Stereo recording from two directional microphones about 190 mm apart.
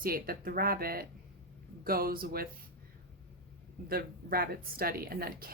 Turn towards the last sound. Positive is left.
turn(degrees=-50)  # may be behind; listen again after turning